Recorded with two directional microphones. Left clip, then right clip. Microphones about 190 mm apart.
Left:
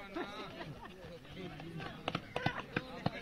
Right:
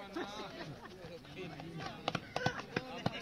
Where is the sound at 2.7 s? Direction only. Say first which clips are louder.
Even; 20° right (ahead or behind).